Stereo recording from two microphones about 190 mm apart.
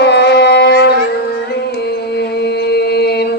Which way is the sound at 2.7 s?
60° left (ahead or behind).